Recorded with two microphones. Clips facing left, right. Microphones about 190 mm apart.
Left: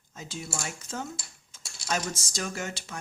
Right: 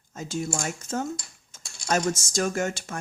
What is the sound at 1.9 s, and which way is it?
Speech, 45° right (ahead or behind).